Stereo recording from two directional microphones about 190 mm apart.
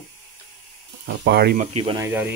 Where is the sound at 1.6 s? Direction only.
30° right (ahead or behind).